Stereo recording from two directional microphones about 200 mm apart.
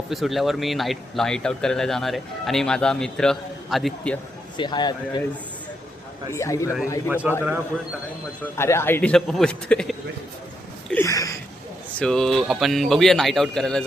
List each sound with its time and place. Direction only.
0.1 s speech: centre (ahead or behind)
4.5 s a man's voice: 20° left (ahead or behind)
6.3 s speech: 15° left (ahead or behind)
7.1 s a man's voice: 10° right (ahead or behind)
8.5 s speech: 10° left (ahead or behind)
10.8 s a sound: 10° left (ahead or behind)
11.9 s speech: 5° left (ahead or behind)